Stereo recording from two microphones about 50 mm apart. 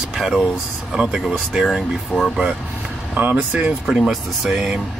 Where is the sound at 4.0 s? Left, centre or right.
Centre.